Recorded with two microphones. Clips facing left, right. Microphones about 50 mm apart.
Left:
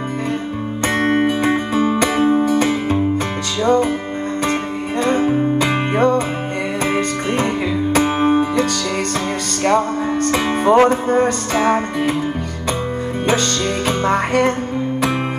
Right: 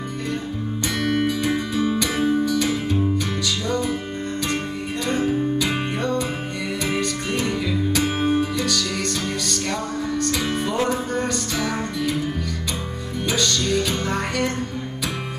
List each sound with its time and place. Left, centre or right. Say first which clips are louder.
0.9 s music: left 6 dB; left
5.0 s music: left 6 dB; left
7.9 s music: left 7 dB; left
13.3 s music: left 3 dB; left